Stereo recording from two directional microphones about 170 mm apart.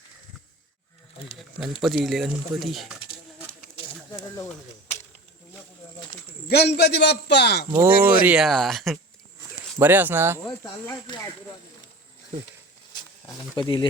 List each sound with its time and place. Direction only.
1.8 s speech: centre (ahead or behind)
6.5 s a man's voice: 85° left
7.7 s speech: 10° right (ahead or behind)
9.7 s speech: 10° right (ahead or behind)
10.8 s speech: 25° left (ahead or behind)
13.6 s speech: 30° left (ahead or behind)